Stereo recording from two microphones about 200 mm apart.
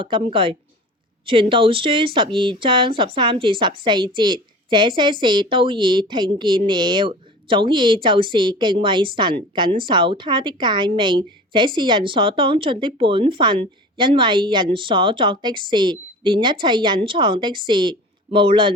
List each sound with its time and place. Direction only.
0.0 s speech: 25° right (ahead or behind)